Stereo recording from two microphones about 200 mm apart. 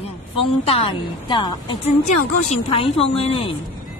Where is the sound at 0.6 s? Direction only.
25° left (ahead or behind).